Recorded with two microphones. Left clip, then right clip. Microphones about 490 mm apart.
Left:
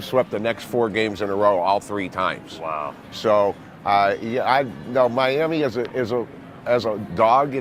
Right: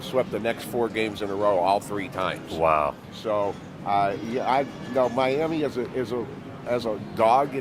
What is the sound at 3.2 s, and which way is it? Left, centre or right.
Speech, left.